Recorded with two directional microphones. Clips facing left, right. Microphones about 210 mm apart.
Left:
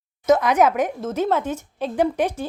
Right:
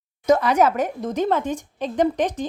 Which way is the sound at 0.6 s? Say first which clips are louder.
Left 1 dB; 10° left (ahead or behind).